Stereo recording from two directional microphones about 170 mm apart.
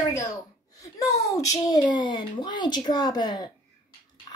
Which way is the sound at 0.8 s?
20° left (ahead or behind).